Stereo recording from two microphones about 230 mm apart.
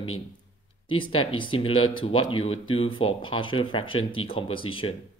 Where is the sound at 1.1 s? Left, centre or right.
Left.